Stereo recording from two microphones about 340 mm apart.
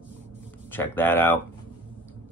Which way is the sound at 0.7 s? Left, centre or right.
Centre.